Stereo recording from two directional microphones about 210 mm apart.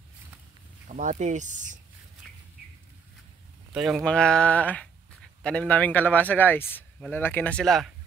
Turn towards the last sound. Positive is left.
turn(degrees=5)  # may be behind; listen again after turning